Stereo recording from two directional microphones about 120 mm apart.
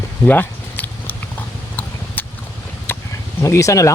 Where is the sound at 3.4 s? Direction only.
25° left (ahead or behind).